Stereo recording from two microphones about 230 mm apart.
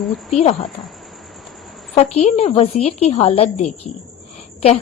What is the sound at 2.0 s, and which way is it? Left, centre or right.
A woman's voice, left.